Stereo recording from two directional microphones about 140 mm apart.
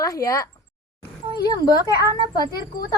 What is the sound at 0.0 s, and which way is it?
A woman's voice, 25° left (ahead or behind).